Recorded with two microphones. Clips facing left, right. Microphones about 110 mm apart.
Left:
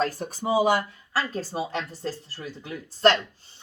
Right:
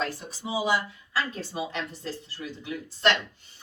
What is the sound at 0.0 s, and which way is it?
Speech, 50° left (ahead or behind).